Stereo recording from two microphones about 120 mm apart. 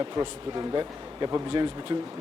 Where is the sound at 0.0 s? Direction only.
35° right (ahead or behind).